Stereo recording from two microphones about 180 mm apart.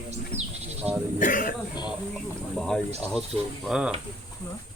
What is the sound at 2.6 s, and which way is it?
Speech, 5° left (ahead or behind).